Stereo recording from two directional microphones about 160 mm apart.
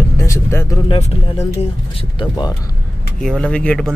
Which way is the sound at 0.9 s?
45° left (ahead or behind).